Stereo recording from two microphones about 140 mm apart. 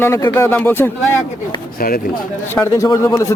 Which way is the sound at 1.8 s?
90° left.